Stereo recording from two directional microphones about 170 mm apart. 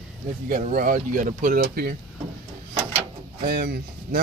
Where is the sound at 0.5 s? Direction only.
50° right (ahead or behind).